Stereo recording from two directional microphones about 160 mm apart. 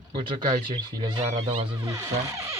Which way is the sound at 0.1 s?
30° right (ahead or behind).